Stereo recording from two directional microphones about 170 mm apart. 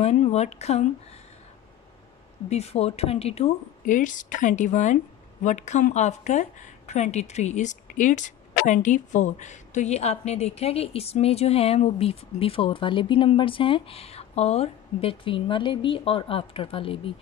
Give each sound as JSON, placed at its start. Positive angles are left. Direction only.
{"t": 0.0, "sound": "speech", "side_deg": 40}
{"t": 2.5, "sound": "speech", "side_deg": 35}